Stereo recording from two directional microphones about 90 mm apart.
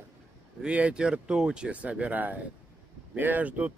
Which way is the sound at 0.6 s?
15° right (ahead or behind).